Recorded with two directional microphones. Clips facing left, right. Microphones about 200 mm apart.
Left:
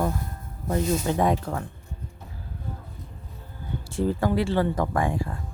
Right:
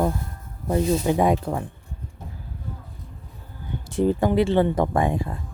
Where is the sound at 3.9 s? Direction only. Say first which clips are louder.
Right 4 dB; 20° right (ahead or behind).